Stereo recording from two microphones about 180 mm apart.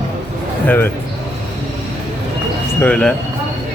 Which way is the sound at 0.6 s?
10° left (ahead or behind).